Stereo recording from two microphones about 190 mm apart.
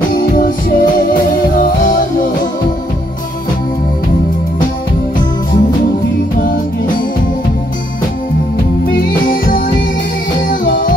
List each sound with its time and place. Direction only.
0.1 s music: 45° left (ahead or behind)
6.3 s music: 45° left (ahead or behind)
8.9 s music: 45° left (ahead or behind)